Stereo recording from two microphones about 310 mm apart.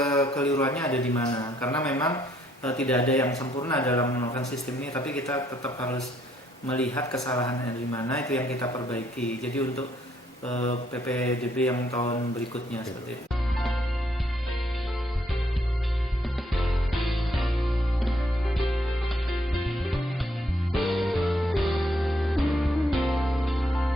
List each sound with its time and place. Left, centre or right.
0.0 s a sound: centre
0.5 s speech: centre
6.7 s mantra: centre
7.9 s speech: centre
10.5 s speech: left
10.9 s mantra: centre
16.6 s music: centre